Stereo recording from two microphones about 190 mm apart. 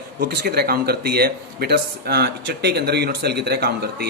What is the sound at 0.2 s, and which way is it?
A man's voice, 55° right (ahead or behind).